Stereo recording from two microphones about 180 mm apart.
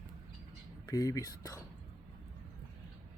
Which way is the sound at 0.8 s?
20° left (ahead or behind).